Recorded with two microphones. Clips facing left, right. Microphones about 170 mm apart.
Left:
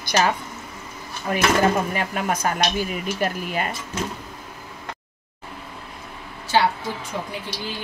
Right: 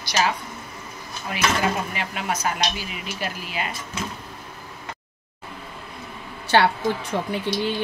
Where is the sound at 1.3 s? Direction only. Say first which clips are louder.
Left 4 dB; 45° left (ahead or behind).